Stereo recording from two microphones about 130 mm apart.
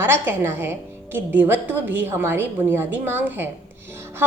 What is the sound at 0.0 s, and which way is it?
A woman's voice, 15° right (ahead or behind).